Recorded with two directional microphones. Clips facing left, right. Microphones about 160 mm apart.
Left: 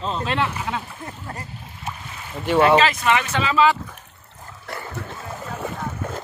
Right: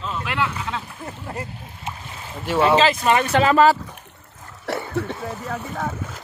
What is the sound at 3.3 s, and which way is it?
Speech, 50° right (ahead or behind).